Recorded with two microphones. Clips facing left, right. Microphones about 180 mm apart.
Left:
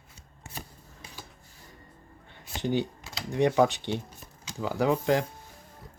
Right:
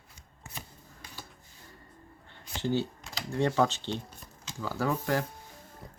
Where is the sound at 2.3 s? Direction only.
15° left (ahead or behind).